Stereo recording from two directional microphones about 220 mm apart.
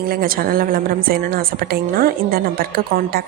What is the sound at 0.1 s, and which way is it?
A woman's voice, 40° right (ahead or behind).